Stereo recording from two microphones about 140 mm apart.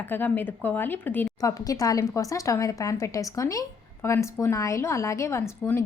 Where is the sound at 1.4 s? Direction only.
25° left (ahead or behind).